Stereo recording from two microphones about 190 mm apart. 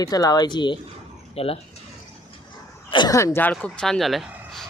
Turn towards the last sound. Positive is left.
turn(degrees=0)  # may be behind; listen again after turning